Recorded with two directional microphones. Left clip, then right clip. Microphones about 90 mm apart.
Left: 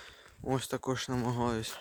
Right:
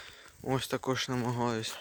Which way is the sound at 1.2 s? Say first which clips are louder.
Right 1 dB; 85° left.